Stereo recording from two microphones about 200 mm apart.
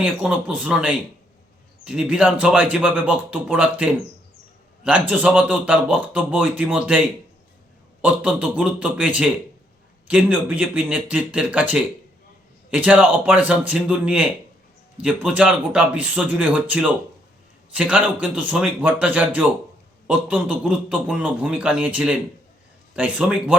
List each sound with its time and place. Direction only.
0.0 s a man's voice: 5° right (ahead or behind)
8.0 s a man's voice: 5° right (ahead or behind)